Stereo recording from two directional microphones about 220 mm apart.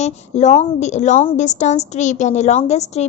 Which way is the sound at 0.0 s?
30° left (ahead or behind).